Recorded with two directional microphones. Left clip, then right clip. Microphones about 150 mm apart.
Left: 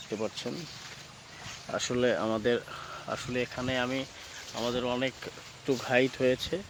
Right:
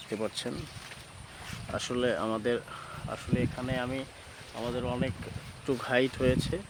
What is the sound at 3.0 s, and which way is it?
Speech, 55° left (ahead or behind).